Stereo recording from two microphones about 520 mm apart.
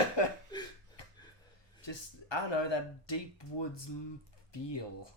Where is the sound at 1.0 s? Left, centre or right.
Left.